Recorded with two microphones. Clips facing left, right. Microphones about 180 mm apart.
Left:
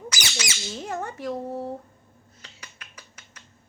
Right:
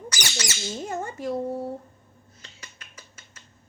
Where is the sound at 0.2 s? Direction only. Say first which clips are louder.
Right 3 dB; 10° left (ahead or behind).